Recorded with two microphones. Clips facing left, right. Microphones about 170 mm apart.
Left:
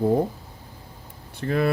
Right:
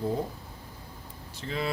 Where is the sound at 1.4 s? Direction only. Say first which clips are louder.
Left 9 dB; 60° left (ahead or behind).